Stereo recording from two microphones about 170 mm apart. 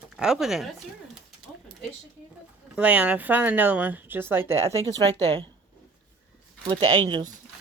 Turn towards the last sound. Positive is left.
turn(degrees=-30)  # may be behind; listen again after turning